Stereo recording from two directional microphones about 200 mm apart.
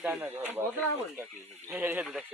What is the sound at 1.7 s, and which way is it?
Speech, 10° right (ahead or behind).